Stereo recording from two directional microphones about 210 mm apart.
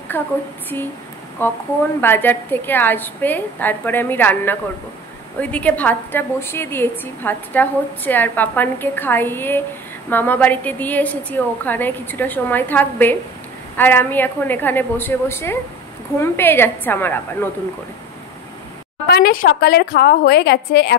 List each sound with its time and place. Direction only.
0.1 s a woman's voice: 10° left (ahead or behind)
1.4 s a woman's voice: 10° left (ahead or behind)
19.0 s a woman's voice: 50° left (ahead or behind)